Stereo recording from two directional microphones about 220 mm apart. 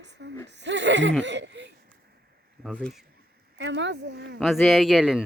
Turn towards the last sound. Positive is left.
turn(degrees=0)  # may be behind; listen again after turning